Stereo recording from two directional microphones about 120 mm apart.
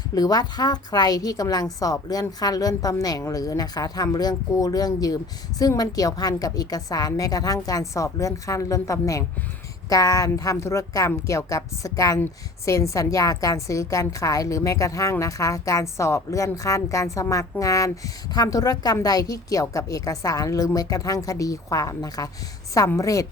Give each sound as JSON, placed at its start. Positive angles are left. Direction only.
{"t": 0.1, "sound": "a woman's voice", "side_deg": 30}